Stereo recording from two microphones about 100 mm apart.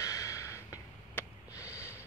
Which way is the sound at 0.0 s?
35° left (ahead or behind).